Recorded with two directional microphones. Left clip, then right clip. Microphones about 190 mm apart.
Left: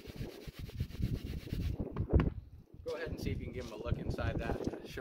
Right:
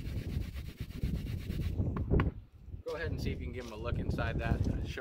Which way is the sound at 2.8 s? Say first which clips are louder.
Right 1 dB; centre (ahead or behind).